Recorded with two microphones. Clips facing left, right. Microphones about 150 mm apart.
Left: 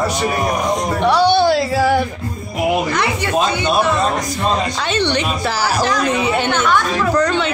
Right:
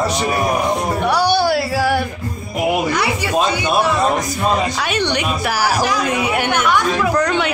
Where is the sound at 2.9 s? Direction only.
10° right (ahead or behind).